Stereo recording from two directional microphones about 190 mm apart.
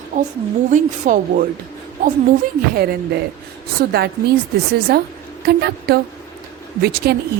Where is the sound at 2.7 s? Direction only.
55° right (ahead or behind).